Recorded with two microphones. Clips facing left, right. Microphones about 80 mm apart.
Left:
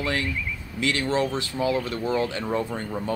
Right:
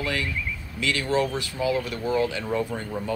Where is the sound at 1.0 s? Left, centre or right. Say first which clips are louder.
Right 2 dB; left.